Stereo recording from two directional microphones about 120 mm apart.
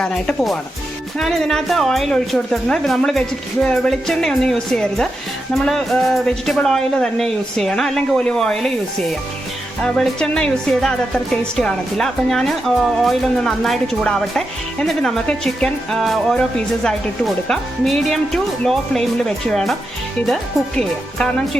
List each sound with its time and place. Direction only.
0.0 s a woman's voice: 5° left (ahead or behind)